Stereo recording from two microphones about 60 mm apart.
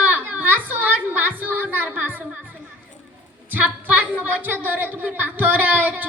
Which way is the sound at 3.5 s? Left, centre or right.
Right.